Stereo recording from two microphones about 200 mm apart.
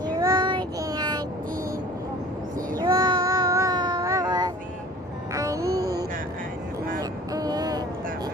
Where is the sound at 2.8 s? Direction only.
20° right (ahead or behind).